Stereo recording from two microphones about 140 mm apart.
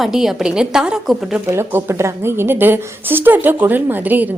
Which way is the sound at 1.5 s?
20° right (ahead or behind).